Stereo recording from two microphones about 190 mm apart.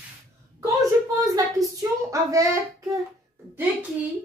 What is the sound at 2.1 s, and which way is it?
Speech, 15° right (ahead or behind).